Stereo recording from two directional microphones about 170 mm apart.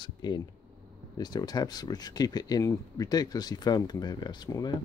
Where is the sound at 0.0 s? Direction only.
25° left (ahead or behind).